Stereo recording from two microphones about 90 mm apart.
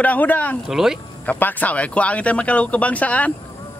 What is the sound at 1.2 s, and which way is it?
Speech, 15° left (ahead or behind).